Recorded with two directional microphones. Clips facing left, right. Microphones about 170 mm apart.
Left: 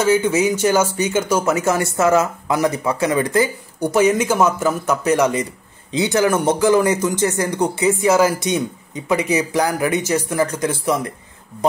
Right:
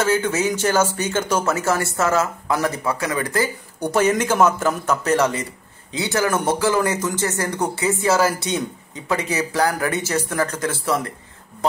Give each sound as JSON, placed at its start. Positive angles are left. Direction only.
{"t": 0.0, "sound": "speech", "side_deg": 15}